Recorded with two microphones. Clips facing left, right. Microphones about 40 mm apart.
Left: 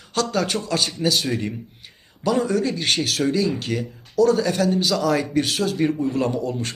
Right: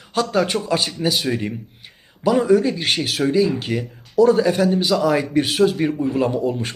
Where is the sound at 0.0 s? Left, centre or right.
Centre.